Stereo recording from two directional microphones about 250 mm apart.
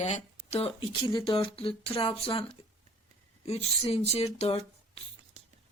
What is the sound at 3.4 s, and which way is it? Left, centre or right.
Speech, left.